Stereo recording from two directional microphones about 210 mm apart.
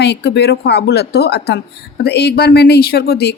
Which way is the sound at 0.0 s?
55° left (ahead or behind).